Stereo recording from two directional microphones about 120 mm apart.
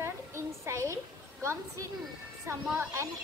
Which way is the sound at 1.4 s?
25° right (ahead or behind).